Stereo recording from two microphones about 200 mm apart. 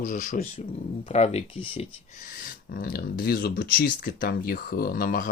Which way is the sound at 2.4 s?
45° left (ahead or behind).